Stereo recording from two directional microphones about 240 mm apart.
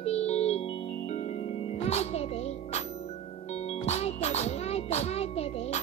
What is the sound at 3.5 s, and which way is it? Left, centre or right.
Music, left.